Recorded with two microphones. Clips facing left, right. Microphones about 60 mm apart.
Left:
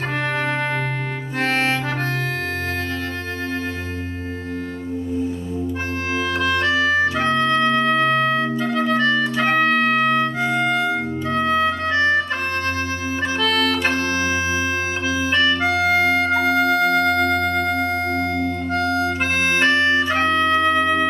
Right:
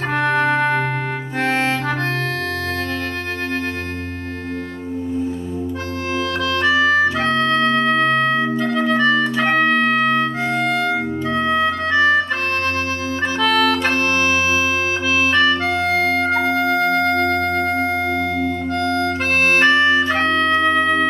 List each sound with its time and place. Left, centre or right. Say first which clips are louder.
0.3 s organ: right 7 dB; centre
1.4 s clarinet: right 1 dB; centre
6.6 s organ: right 5 dB; centre
11.3 s music: even; centre
13.4 s music: right 4 dB; centre
13.9 s music: right 3 dB; right
15.0 s music: right 5 dB; right
15.3 s organ: left 2 dB; centre
16.3 s music: even; centre
19.6 s music: right 1 dB; centre